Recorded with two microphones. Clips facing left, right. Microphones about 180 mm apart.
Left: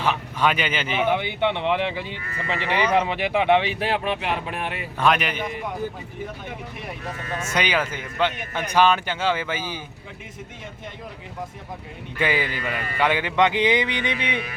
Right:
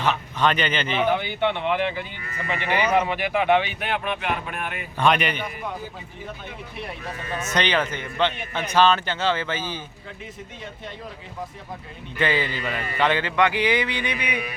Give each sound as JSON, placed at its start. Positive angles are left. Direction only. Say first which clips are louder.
{"t": 0.0, "sound": "a man's voice", "louder": "even", "side_deg": 10}
{"t": 1.2, "sound": "speech", "louder": "left 1 dB", "side_deg": 25}
{"t": 4.9, "sound": "a man's voice", "louder": "right 1 dB", "side_deg": 0}
{"t": 7.5, "sound": "a man's voice", "louder": "right 1 dB", "side_deg": 10}
{"t": 12.2, "sound": "speech", "louder": "even", "side_deg": 10}